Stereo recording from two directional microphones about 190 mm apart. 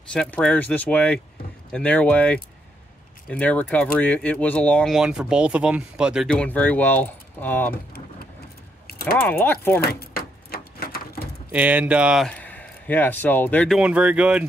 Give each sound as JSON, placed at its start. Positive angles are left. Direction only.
{"t": 0.1, "sound": "speech", "side_deg": 5}
{"t": 6.3, "sound": "speech", "side_deg": 5}
{"t": 9.0, "sound": "speech", "side_deg": 10}
{"t": 9.8, "sound": "a sound", "side_deg": 55}
{"t": 11.5, "sound": "speech", "side_deg": -10}
{"t": 13.7, "sound": "speech", "side_deg": -5}